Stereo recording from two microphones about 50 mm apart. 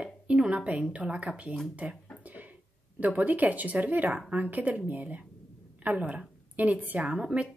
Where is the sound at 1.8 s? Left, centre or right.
Right.